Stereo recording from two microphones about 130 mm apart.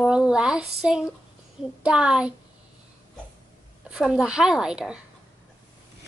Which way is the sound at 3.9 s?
5° right (ahead or behind).